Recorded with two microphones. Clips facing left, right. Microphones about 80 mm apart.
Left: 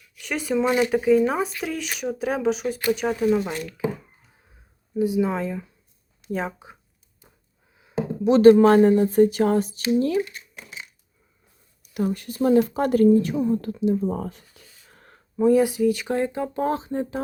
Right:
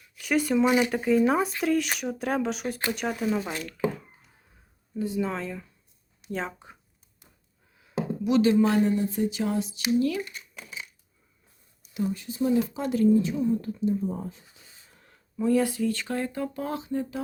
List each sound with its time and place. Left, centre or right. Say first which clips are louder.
0.2 s speech: right 1 dB; centre
0.9 s speech: left 4 dB; centre
4.9 s speech: left 7 dB; centre
7.8 s a sound: left 3 dB; left
8.4 s speech: left 9 dB; left
10.0 s speech: left 6 dB; left
11.8 s a woman's voice: left 4 dB; left
14.6 s a sound: left 2 dB; right
14.9 s a sound: left 6 dB; left
15.4 s speech: left 6 dB; centre; by 17.2 s left